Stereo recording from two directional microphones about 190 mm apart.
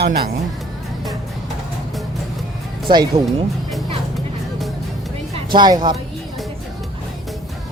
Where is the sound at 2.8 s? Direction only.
25° right (ahead or behind).